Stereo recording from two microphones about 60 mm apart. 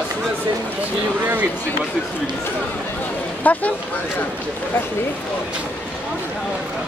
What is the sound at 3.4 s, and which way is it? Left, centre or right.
Speech, left.